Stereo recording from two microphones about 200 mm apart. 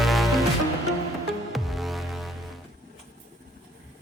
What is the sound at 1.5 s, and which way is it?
Music, centre (ahead or behind).